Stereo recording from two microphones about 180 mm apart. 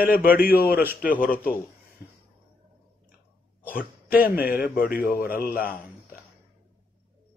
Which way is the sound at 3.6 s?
50° left (ahead or behind).